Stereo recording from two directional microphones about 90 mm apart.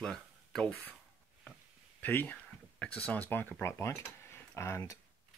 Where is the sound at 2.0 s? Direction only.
20° left (ahead or behind).